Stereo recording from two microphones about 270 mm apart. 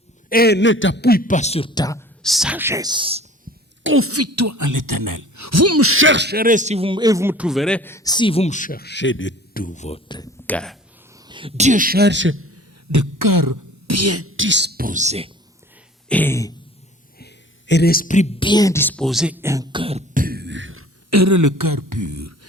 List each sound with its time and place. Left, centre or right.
0.3 s a man's voice: left; by 2.0 s centre
2.2 s speech: centre
3.8 s speech: right; by 9.6 s left
9.6 s speech: left
10.4 s speech: centre
11.3 s speech: centre; by 12.6 s right
12.9 s speech: right
13.6 s speech: right
16.0 s a sound: centre
17.2 s a woman's voice: left; by 20.8 s right
21.1 s speech: right